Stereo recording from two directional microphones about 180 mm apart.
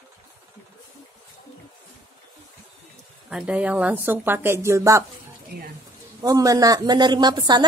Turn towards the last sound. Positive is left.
turn(degrees=-25)  # may be behind; listen again after turning